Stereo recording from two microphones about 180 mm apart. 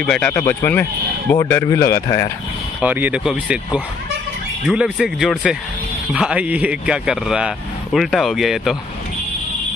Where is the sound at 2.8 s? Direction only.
10° right (ahead or behind).